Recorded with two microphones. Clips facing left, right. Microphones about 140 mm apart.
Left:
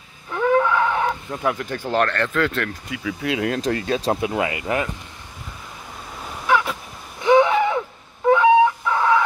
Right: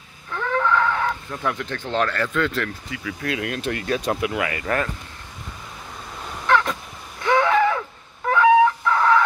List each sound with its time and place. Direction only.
0.3 s livestock: 15° left (ahead or behind)
1.5 s speech: 5° left (ahead or behind)
2.0 s speech: 5° right (ahead or behind)
3.1 s speech: 20° left (ahead or behind)
6.2 s vehicle: 10° left (ahead or behind)
7.2 s a sound: 20° left (ahead or behind)
8.3 s chicken: 15° left (ahead or behind)